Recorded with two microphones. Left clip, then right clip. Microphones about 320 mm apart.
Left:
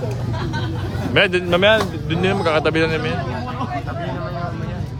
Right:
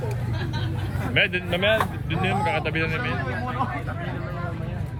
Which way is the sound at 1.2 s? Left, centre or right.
Centre.